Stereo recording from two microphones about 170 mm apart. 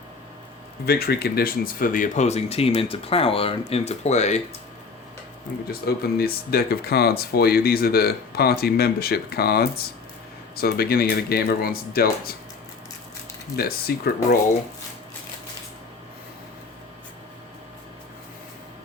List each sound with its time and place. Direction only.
0.9 s speech: 65° left (ahead or behind); by 4.4 s 40° left (ahead or behind)
5.6 s speech: 65° left (ahead or behind)
13.6 s speech: 65° left (ahead or behind)